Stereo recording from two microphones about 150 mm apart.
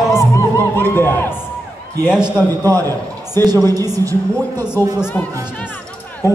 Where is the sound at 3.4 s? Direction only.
25° right (ahead or behind).